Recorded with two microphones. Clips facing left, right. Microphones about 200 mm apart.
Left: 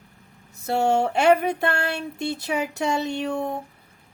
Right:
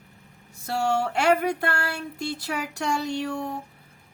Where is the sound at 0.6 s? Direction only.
20° left (ahead or behind).